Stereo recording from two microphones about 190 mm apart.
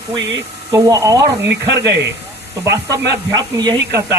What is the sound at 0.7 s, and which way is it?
Speech, 20° right (ahead or behind).